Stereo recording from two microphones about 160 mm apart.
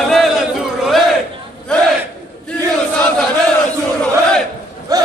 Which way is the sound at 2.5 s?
5° left (ahead or behind).